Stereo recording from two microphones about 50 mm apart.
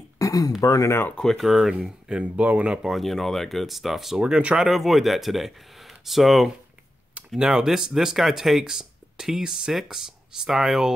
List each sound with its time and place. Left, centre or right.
0.2 s a sound: left
0.6 s speech: left
1.2 s speech: centre
1.7 s speech: centre
2.9 s speech: centre
4.3 s speech: right
4.6 s speech: centre